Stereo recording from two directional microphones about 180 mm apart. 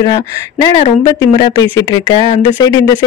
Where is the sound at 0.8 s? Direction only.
35° left (ahead or behind).